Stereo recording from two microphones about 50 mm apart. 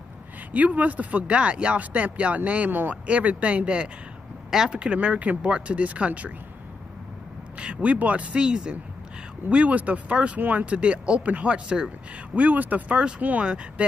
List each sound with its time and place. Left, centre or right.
0.5 s speech: right
4.5 s speech: centre
4.7 s speech: right
7.5 s speech: right
8.4 s speech: centre
12.4 s speech: right